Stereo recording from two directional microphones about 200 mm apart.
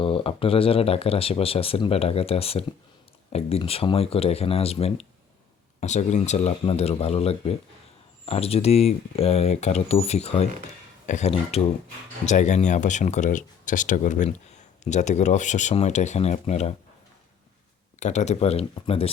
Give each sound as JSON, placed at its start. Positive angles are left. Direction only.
{"t": 0.0, "sound": "speech", "side_deg": 25}
{"t": 18.0, "sound": "speech", "side_deg": 35}